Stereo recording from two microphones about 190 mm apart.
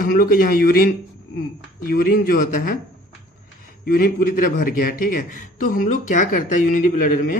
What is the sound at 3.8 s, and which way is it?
A man's voice, 50° left (ahead or behind).